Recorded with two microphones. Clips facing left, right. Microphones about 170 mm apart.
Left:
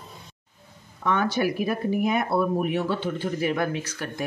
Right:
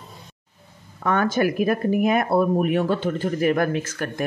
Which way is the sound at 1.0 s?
50° right (ahead or behind).